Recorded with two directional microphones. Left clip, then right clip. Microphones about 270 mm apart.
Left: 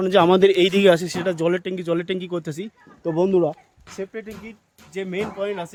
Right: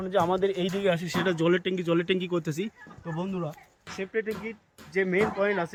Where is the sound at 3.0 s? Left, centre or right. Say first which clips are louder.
Left 15 dB; left.